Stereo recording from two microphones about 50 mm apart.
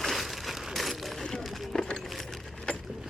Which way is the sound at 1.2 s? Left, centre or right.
Centre.